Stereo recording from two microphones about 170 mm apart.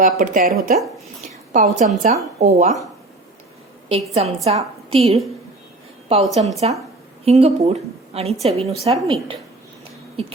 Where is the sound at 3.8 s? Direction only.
35° right (ahead or behind).